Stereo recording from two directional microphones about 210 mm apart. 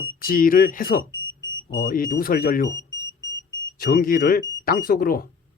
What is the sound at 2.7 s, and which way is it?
Alarm, 15° left (ahead or behind).